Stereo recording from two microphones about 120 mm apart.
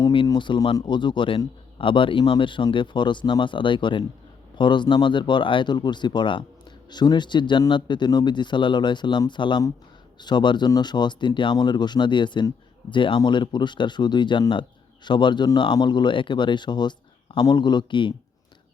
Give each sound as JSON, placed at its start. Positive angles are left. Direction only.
{"t": 0.3, "sound": "speech", "side_deg": 40}